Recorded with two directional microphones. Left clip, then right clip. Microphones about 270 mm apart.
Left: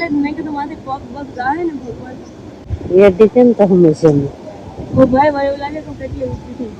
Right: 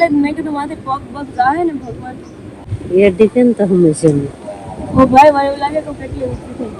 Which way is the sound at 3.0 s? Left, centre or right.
Right.